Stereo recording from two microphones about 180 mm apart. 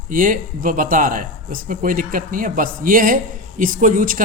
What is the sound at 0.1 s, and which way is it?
Speech, 50° right (ahead or behind).